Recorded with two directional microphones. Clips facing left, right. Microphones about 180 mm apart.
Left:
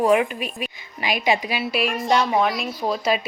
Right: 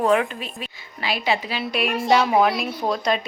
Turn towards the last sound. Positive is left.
turn(degrees=5)  # may be behind; listen again after turning